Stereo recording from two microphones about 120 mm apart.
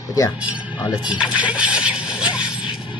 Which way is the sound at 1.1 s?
10° right (ahead or behind).